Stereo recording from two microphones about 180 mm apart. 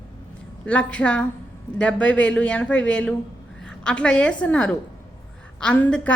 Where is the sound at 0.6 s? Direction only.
5° left (ahead or behind).